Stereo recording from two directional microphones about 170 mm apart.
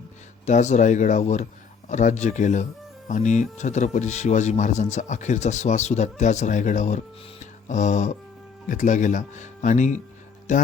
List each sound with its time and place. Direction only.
0.4 s speech: 45° left (ahead or behind)